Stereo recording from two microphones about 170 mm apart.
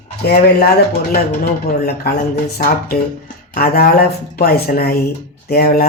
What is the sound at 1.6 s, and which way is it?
Speech, 65° left (ahead or behind).